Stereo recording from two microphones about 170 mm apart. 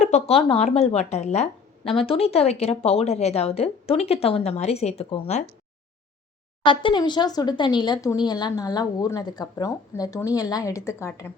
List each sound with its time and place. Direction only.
0.0 s a woman's voice: 40° left (ahead or behind)
6.7 s speech: 30° left (ahead or behind)